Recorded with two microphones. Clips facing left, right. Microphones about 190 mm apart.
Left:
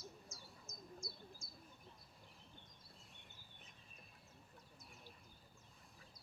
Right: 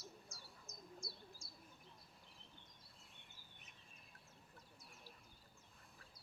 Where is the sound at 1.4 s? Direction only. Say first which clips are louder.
Left 1 dB; 30° right (ahead or behind).